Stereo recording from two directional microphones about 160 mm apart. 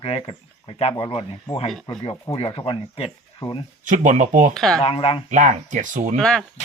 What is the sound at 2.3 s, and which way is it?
Speech, 35° left (ahead or behind).